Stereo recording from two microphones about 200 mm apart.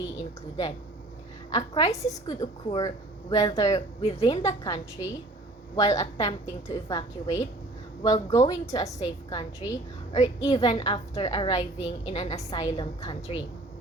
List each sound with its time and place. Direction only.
1.5 s a woman's voice: 20° left (ahead or behind)